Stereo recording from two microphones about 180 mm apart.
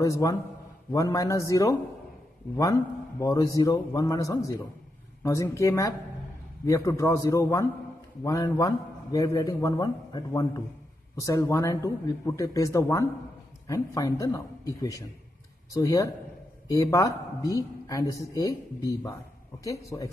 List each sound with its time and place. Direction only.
0.0 s a man's voice: 20° left (ahead or behind)